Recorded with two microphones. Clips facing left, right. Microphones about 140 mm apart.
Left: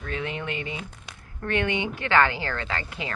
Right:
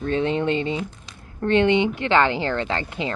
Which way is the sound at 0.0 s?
30° right (ahead or behind).